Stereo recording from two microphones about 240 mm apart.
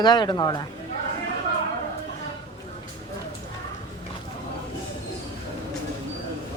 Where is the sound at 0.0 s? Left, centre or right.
Centre.